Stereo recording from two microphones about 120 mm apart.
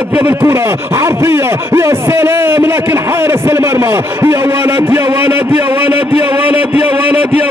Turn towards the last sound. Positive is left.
turn(degrees=-20)  # may be behind; listen again after turning